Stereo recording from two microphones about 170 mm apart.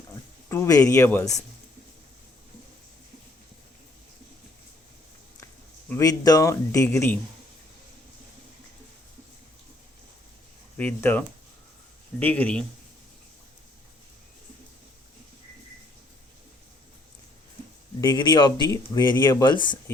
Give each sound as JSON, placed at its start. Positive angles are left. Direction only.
{"t": 0.1, "sound": "speech", "side_deg": 15}
{"t": 5.9, "sound": "a man's voice", "side_deg": 20}
{"t": 10.8, "sound": "a man's voice", "side_deg": 10}
{"t": 12.2, "sound": "a man's voice", "side_deg": 10}
{"t": 18.0, "sound": "speech", "side_deg": 25}